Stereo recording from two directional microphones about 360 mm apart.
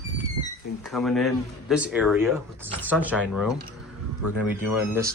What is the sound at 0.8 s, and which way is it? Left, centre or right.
Speech, centre.